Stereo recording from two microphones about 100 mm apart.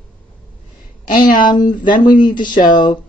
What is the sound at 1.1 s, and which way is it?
Speech, 50° left (ahead or behind).